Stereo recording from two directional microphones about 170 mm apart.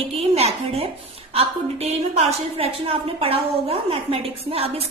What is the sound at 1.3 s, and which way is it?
A woman's voice, 35° right (ahead or behind).